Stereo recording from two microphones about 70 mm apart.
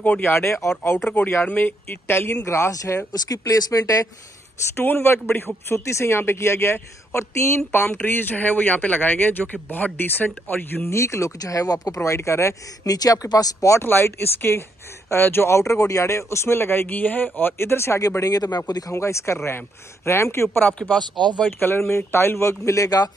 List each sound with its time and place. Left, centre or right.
0.0 s speech: left
0.3 s a man's voice: left
1.4 s speech: left
1.9 s a man's voice: left
2.4 s speech: left
4.7 s a man's voice: left
10.9 s speech: left
12.8 s speech: left
13.7 s a man's voice: left
18.2 s speech: left
18.9 s a man's voice: left
21.0 s speech: right
21.5 s a man's voice: left